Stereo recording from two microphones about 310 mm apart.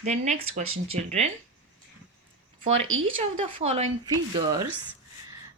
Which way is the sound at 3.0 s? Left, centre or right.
Centre.